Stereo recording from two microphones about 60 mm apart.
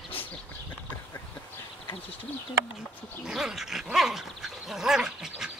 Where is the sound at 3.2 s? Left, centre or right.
Centre.